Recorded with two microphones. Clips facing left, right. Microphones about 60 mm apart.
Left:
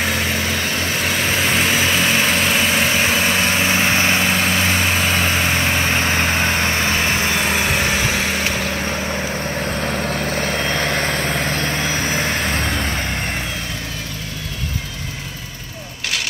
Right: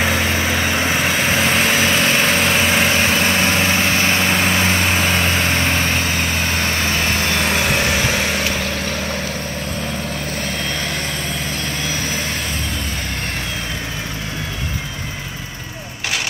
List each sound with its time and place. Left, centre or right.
0.0 s vehicle: centre
5.9 s vehicle: left
10.3 s vehicle: left